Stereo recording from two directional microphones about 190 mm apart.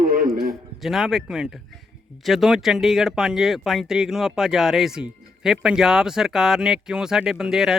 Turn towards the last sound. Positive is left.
turn(degrees=-5)  # may be behind; listen again after turning